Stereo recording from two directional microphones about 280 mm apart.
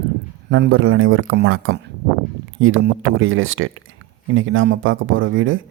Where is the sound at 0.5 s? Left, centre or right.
Right.